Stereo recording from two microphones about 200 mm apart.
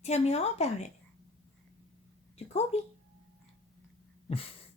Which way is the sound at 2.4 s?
30° left (ahead or behind).